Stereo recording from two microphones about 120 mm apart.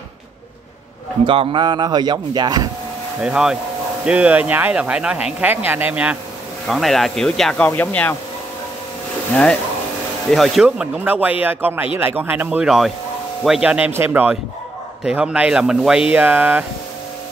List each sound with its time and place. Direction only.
1.2 s speech: 45° right (ahead or behind)
3.2 s speech: 5° right (ahead or behind)
6.7 s speech: centre (ahead or behind)
9.3 s speech: 10° left (ahead or behind)
10.3 s speech: centre (ahead or behind)